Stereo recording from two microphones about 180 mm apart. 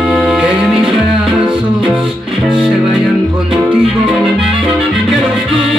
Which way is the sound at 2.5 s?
5° right (ahead or behind).